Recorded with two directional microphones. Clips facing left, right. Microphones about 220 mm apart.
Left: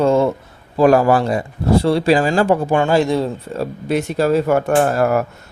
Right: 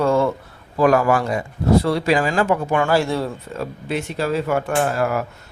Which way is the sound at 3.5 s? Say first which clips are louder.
Left 6 dB; 40° left (ahead or behind).